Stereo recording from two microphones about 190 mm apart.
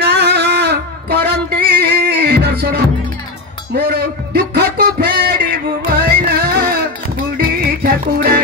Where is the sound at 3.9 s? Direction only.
60° right (ahead or behind).